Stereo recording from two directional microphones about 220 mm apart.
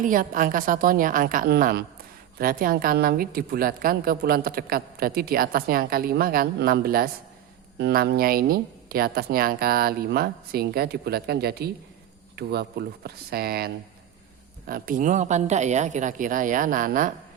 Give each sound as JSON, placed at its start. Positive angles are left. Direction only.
{"t": 0.0, "sound": "a woman's voice", "side_deg": -40}
{"t": 14.7, "sound": "speech", "side_deg": -40}